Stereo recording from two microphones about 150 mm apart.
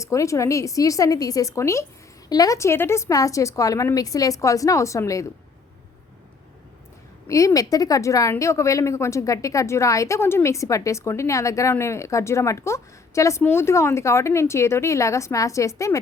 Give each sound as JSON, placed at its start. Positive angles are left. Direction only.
{"t": 0.0, "sound": "speech", "side_deg": 20}
{"t": 7.3, "sound": "speech", "side_deg": 20}